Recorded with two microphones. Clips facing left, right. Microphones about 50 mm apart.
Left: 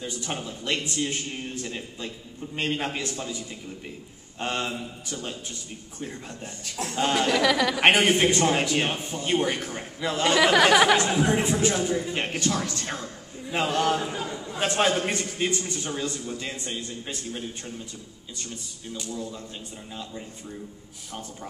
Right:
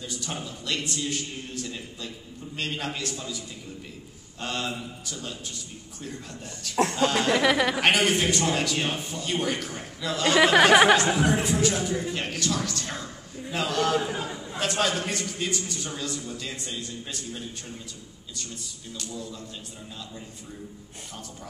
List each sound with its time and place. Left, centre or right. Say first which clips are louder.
0.0 s a man's voice: left 2 dB; left
6.7 s speech: right 9 dB; right
7.3 s speech: even; centre
7.8 s a man's voice: left 6 dB; left
10.3 s speech: right 2 dB; centre
11.2 s a man's voice: left 1 dB; left
14.1 s chatter: left 1 dB; centre
14.6 s a man's voice: left 3 dB; left
19.0 s a man's voice: left 3 dB; left